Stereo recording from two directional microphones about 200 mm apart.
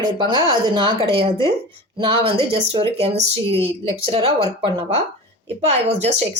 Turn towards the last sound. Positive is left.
turn(degrees=-30)  # may be behind; listen again after turning